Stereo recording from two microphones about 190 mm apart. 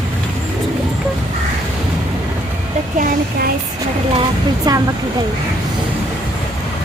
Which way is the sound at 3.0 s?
55° right (ahead or behind).